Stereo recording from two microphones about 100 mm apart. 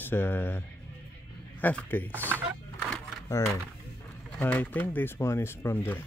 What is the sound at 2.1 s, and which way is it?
Speech, 20° right (ahead or behind).